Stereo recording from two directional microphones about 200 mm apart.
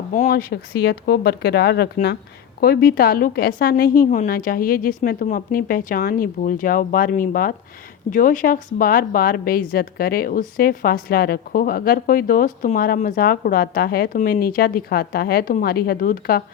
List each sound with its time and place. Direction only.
0.1 s a woman's voice: 45° left (ahead or behind)